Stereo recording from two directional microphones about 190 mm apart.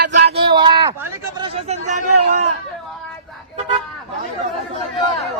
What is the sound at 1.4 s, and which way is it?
Speech, 30° right (ahead or behind).